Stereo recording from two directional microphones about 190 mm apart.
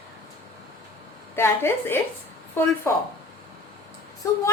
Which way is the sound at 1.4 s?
10° left (ahead or behind).